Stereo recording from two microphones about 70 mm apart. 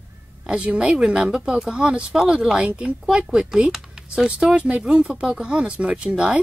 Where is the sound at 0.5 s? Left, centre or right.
Centre.